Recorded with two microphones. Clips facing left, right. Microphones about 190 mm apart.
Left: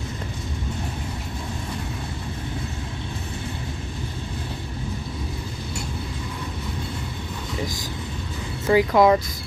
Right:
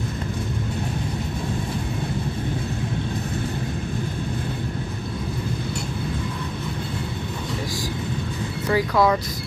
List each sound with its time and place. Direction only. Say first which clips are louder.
8.6 s speech: left 3 dB; 20° left (ahead or behind)